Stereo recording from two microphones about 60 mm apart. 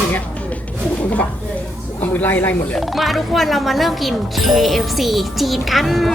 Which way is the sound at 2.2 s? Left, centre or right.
Left.